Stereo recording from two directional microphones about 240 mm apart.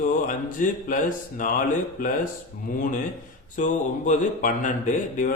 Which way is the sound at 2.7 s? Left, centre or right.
Left.